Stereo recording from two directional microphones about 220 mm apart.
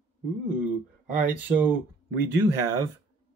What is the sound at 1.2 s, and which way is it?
Speech, 5° right (ahead or behind).